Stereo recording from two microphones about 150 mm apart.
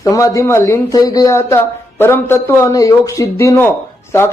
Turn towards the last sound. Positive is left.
turn(degrees=15)  # may be behind; listen again after turning